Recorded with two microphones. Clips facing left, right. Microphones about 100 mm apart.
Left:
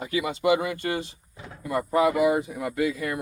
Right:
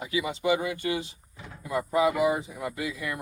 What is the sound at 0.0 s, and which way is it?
Speech, 55° left (ahead or behind).